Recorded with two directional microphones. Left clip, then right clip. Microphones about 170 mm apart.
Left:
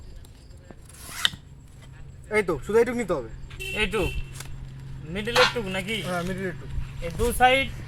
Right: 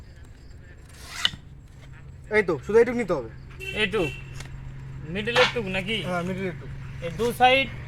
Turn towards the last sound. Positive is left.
turn(degrees=15)  # may be behind; listen again after turning